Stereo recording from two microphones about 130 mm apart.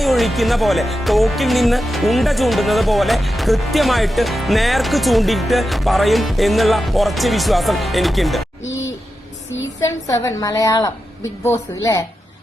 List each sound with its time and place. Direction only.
0.0 s speech: centre (ahead or behind)
10.1 s a woman's voice: 25° left (ahead or behind)